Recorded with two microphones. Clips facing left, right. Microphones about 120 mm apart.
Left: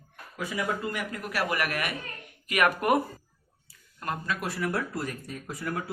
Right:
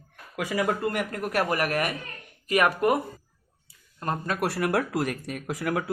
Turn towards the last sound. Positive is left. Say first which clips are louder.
# right 5 dB
turn(degrees=-90)